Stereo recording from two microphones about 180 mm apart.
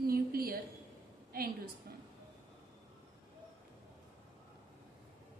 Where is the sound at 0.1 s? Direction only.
55° right (ahead or behind).